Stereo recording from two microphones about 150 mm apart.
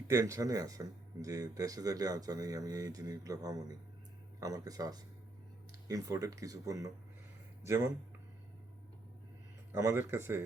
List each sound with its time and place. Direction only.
0.1 s speech: 20° right (ahead or behind)
9.7 s speech: 20° right (ahead or behind)